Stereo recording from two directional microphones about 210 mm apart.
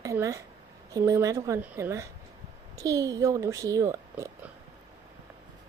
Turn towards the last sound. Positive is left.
turn(degrees=-15)  # may be behind; listen again after turning